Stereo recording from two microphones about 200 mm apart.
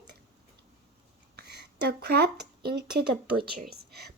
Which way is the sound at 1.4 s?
55° right (ahead or behind).